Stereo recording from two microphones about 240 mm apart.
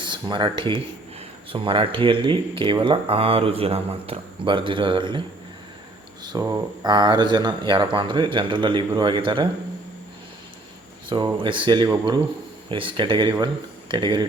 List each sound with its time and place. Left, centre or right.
0.0 s speech: centre
6.2 s speech: centre
11.1 s speech: centre